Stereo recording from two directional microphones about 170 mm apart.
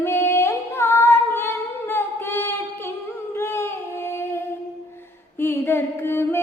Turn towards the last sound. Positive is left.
turn(degrees=15)  # may be behind; listen again after turning